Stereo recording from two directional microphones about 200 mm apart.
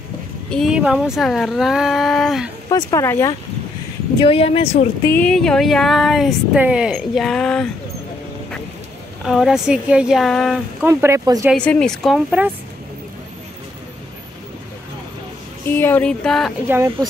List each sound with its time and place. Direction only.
0.5 s speech: centre (ahead or behind)
2.7 s speech: 15° left (ahead or behind)
4.2 s speech: 30° left (ahead or behind)
5.0 s speech: 10° left (ahead or behind)
9.2 s speech: centre (ahead or behind)
10.8 s speech: 10° right (ahead or behind)
11.5 s speech: 5° left (ahead or behind)
15.6 s speech: 10° left (ahead or behind)
16.6 s speech: 10° right (ahead or behind)